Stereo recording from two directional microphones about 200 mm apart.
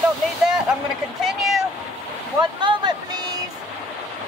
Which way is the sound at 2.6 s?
20° right (ahead or behind).